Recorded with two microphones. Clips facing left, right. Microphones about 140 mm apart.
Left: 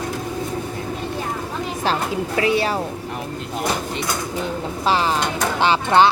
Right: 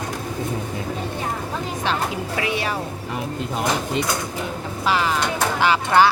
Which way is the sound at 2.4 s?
35° left (ahead or behind).